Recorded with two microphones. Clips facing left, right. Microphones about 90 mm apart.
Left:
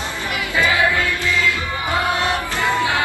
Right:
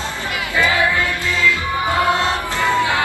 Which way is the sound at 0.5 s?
20° left (ahead or behind).